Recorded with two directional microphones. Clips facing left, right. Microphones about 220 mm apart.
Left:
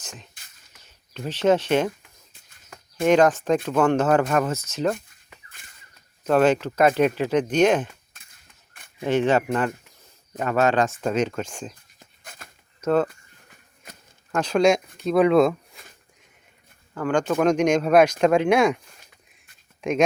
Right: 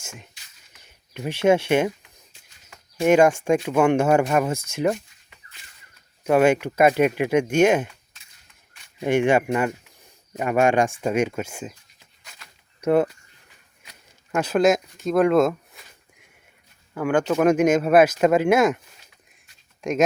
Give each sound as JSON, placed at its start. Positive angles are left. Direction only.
{"t": 0.0, "sound": "music", "side_deg": -10}
{"t": 0.8, "sound": "speech", "side_deg": -15}
{"t": 3.0, "sound": "speech", "side_deg": -10}
{"t": 5.0, "sound": "a sound", "side_deg": 50}
{"t": 6.2, "sound": "speech", "side_deg": -10}
{"t": 8.1, "sound": "cap gun", "side_deg": 55}
{"t": 9.0, "sound": "speech", "side_deg": -15}
{"t": 11.9, "sound": "a sound", "side_deg": 50}
{"t": 12.8, "sound": "speech", "side_deg": -10}
{"t": 13.8, "sound": "a sound", "side_deg": 50}
{"t": 14.3, "sound": "speech", "side_deg": -5}
{"t": 16.9, "sound": "speech", "side_deg": -10}
{"t": 19.8, "sound": "speech", "side_deg": 0}